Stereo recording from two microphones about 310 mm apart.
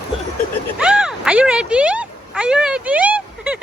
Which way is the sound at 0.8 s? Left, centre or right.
Centre.